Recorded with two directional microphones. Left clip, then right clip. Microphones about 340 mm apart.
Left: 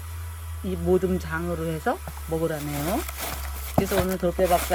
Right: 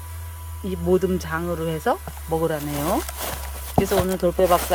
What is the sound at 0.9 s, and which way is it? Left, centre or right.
Speech, centre.